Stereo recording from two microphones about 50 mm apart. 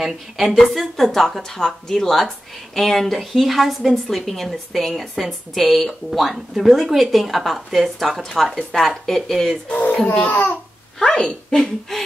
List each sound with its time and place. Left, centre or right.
0.0 s speech: centre
8.2 s speech: centre
9.7 s speech: left
11.0 s speech: centre